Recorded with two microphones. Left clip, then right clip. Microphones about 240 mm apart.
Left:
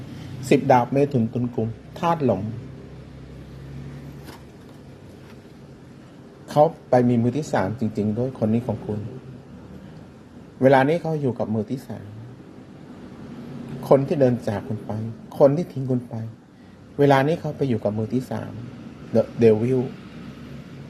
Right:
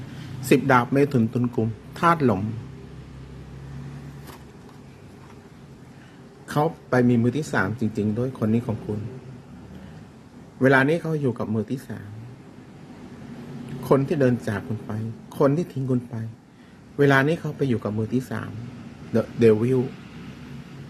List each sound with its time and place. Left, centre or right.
0.4 s speech: centre
6.5 s a man's voice: centre
10.6 s a man's voice: centre
13.8 s a man's voice: centre